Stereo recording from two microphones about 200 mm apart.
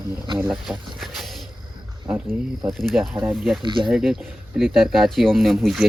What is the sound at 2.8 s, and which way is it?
Speech, centre (ahead or behind).